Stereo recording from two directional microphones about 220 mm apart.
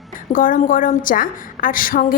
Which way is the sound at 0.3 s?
40° left (ahead or behind).